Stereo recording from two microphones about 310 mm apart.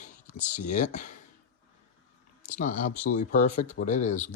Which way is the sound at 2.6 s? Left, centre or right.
Left.